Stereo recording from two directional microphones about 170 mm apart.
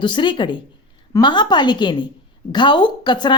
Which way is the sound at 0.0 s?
30° left (ahead or behind).